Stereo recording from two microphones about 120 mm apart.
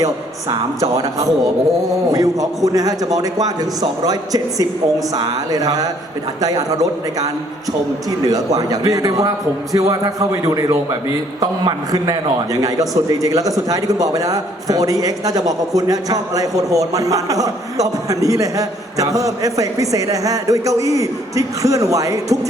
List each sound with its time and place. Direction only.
0.5 s a man's voice: 30° right (ahead or behind)
8.2 s a man's voice: 30° right (ahead or behind)